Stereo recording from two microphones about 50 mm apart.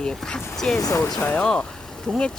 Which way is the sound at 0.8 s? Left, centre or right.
Left.